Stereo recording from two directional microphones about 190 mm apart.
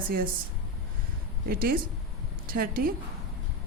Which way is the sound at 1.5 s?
50° right (ahead or behind).